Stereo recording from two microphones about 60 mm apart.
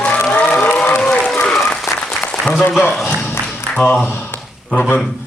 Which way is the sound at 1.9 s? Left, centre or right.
Centre.